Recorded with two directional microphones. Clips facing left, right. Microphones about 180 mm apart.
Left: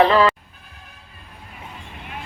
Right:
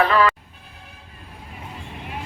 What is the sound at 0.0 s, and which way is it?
Speech, 25° left (ahead or behind).